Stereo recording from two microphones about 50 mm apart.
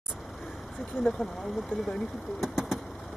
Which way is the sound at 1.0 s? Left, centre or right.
Centre.